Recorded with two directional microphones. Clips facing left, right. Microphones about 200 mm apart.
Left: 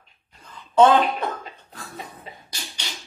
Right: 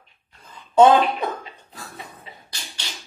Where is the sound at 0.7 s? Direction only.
15° right (ahead or behind).